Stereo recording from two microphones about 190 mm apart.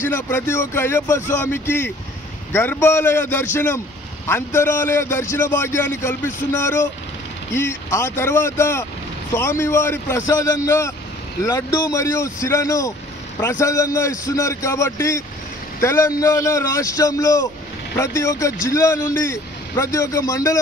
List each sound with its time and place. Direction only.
0.1 s a man's voice: 10° left (ahead or behind)